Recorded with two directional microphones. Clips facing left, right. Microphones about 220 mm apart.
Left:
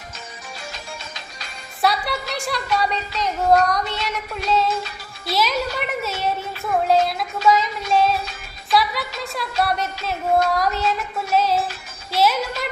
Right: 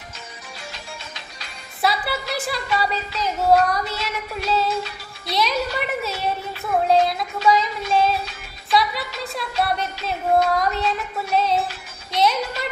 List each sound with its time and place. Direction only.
0.7 s music: 45° left (ahead or behind)
1.8 s a woman's voice: centre (ahead or behind)
4.4 s music: centre (ahead or behind)
5.2 s speech: centre (ahead or behind)
6.8 s a sound: centre (ahead or behind)
8.7 s music: centre (ahead or behind)
12.1 s speech: 5° left (ahead or behind)